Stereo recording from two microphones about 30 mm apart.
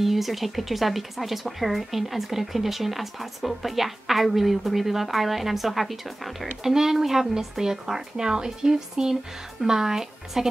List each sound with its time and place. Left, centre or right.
0.0 s speech: centre
6.6 s speech: centre